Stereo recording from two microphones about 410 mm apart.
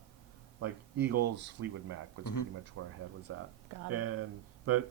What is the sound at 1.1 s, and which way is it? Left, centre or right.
Speech, right.